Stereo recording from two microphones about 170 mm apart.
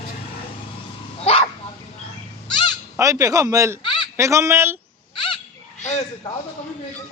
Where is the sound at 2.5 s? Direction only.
25° left (ahead or behind).